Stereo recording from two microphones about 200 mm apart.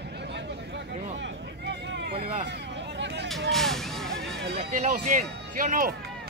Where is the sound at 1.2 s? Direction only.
65° right (ahead or behind).